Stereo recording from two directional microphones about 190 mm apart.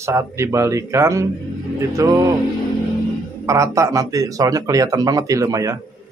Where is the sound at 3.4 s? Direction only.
15° right (ahead or behind).